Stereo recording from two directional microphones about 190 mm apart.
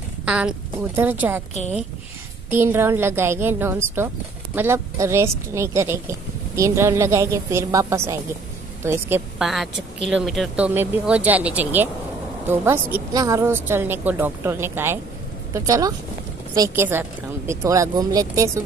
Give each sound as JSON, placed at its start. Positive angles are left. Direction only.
{"t": 0.2, "sound": "a woman's voice", "side_deg": -5}
{"t": 2.5, "sound": "a woman's voice", "side_deg": -10}
{"t": 9.4, "sound": "a woman's voice", "side_deg": 0}